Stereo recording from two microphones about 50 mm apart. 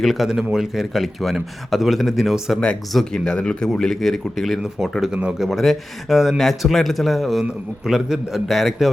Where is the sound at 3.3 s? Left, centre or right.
Centre.